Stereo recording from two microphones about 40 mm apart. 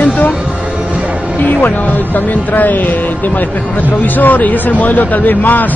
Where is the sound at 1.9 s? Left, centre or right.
Left.